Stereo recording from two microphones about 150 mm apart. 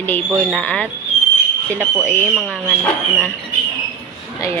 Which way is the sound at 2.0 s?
50° right (ahead or behind).